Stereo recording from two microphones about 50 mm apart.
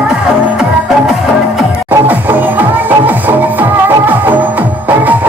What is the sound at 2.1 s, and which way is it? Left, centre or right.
Music, right.